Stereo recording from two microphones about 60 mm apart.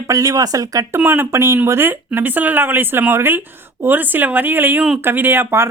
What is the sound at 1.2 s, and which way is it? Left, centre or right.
Speech, right.